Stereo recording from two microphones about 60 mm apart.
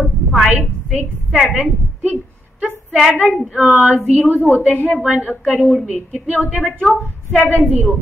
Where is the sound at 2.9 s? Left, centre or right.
Centre.